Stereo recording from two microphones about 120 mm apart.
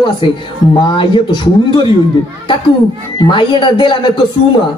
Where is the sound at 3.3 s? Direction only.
40° left (ahead or behind).